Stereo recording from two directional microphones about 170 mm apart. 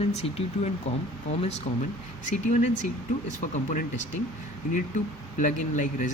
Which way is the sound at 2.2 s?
50° left (ahead or behind).